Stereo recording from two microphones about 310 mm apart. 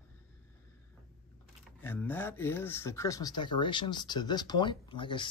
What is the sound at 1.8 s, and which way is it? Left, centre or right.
Speech, centre.